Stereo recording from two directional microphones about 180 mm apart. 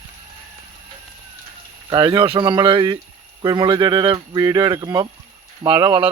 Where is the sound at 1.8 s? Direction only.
25° right (ahead or behind).